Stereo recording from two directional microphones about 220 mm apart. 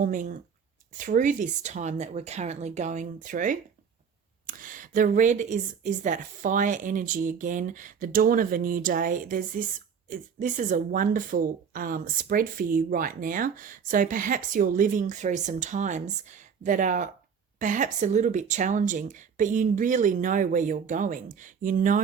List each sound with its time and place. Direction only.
0.0 s speech: 35° right (ahead or behind)